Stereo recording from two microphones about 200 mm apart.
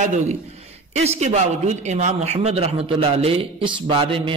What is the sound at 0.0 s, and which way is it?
A man's voice, 40° right (ahead or behind).